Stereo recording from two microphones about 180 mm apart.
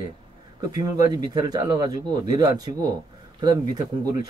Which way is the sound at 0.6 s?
20° right (ahead or behind).